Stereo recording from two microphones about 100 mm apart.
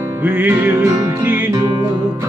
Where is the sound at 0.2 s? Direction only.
15° right (ahead or behind).